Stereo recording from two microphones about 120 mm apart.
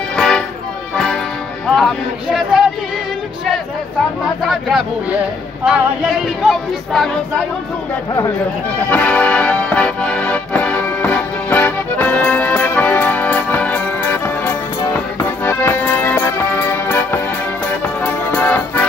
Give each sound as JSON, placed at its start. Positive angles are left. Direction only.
{"t": 0.1, "sound": "music", "side_deg": 5}
{"t": 1.8, "sound": "speech", "side_deg": 0}
{"t": 4.4, "sound": "a sound", "side_deg": 0}
{"t": 6.4, "sound": "speech", "side_deg": 0}
{"t": 8.9, "sound": "music", "side_deg": 10}